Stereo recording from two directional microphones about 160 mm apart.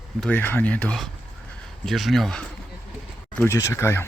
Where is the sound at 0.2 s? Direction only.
10° left (ahead or behind).